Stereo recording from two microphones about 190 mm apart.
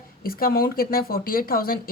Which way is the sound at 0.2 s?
50° left (ahead or behind).